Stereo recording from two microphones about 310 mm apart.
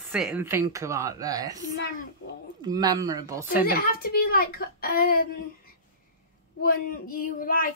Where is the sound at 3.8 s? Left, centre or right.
Left.